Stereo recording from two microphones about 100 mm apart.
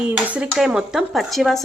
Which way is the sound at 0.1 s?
15° right (ahead or behind).